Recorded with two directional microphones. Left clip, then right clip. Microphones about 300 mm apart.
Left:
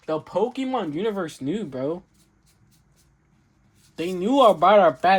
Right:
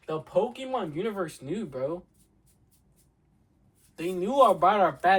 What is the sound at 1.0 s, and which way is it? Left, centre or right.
Speech, left.